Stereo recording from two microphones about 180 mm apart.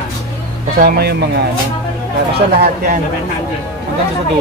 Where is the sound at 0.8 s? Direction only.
60° right (ahead or behind).